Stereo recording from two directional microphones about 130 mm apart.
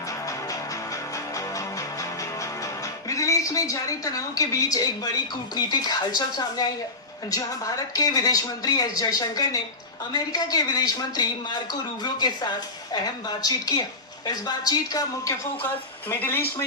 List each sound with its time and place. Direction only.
0.1 s music: 25° left (ahead or behind)
5.5 s speech: 30° left (ahead or behind)
16.0 s speech: 15° left (ahead or behind)